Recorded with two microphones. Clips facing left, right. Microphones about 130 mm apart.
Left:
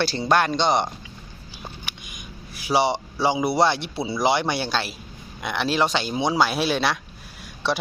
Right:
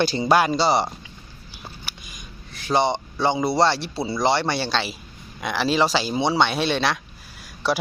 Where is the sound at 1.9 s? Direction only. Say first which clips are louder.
Left 1 dB; 5° right (ahead or behind).